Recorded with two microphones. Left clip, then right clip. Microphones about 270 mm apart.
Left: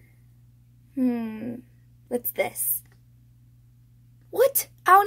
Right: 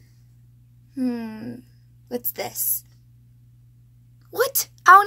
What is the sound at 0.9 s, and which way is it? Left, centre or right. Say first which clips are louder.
A woman's voice: left 1 dB; centre.